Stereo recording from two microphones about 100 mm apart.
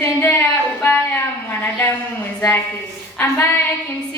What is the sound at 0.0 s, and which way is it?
Singing, 20° left (ahead or behind).